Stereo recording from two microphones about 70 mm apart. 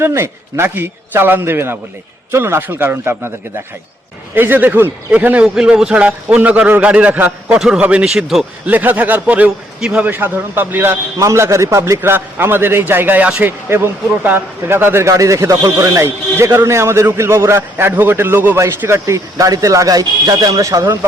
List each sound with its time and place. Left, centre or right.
0.0 s a man's voice: right
4.4 s a man's voice: right
5.5 s a man's voice: centre; by 7.5 s right
7.5 s a man's voice: centre
8.0 s a man's voice: centre
8.6 s a man's voice: right
10.2 s a man's voice: right
11.2 s speech: right
12.1 s a man's voice: right
15.0 s a man's voice: right
20.8 s a man's voice: right